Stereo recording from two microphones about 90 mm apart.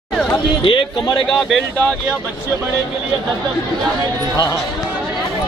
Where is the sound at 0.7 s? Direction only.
70° left (ahead or behind).